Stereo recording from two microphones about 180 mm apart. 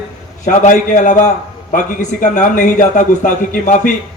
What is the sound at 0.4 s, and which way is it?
A man's voice, 45° left (ahead or behind).